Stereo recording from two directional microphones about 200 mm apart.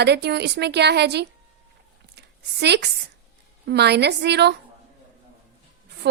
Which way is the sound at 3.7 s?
55° right (ahead or behind).